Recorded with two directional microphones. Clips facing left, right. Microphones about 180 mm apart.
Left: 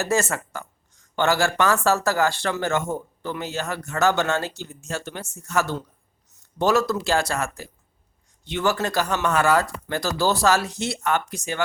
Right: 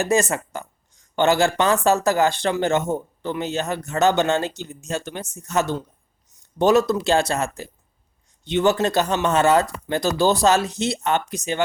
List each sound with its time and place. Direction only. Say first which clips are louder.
0.0 s speech: right 3 dB; 15° right (ahead or behind)